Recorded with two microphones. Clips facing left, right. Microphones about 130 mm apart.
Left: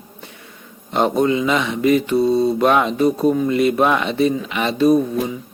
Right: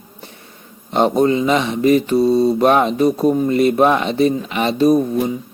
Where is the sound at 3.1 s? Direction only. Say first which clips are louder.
Right 1 dB; 10° right (ahead or behind).